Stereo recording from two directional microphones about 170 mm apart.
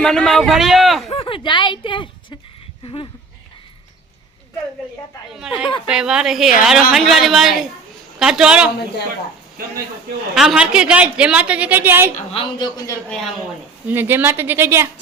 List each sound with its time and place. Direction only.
0.0 s speech: 5° left (ahead or behind)
1.1 s a woman's voice: 30° left (ahead or behind)
5.6 s speech: 30° left (ahead or behind)
5.9 s speech: 5° right (ahead or behind)
10.3 s a woman's voice: 5° right (ahead or behind)
12.3 s speech: 30° left (ahead or behind)
13.1 s speech: 5° left (ahead or behind)
13.8 s a woman's voice: 10° right (ahead or behind)